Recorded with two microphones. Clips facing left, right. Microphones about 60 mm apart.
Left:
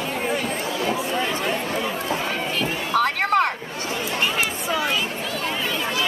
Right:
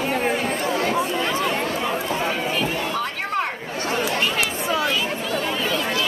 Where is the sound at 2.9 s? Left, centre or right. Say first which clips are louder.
Left 5 dB; left.